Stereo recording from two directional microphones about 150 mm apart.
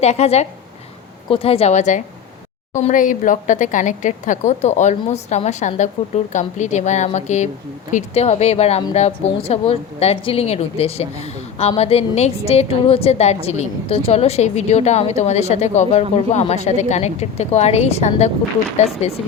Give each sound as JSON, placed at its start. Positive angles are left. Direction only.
{"t": 0.0, "sound": "a woman's voice", "side_deg": 45}